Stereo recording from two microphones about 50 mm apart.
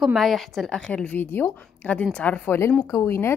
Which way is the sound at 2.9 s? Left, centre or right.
Left.